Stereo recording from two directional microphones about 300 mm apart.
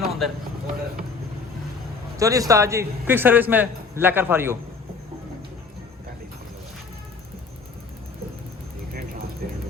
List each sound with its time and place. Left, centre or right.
0.0 s a sound: centre
2.1 s a man's voice: centre
9.4 s music: right